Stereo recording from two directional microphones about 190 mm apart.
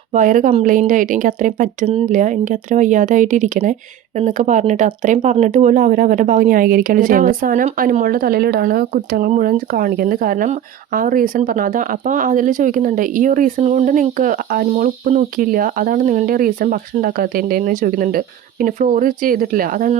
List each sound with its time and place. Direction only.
0.1 s speech: 45° right (ahead or behind)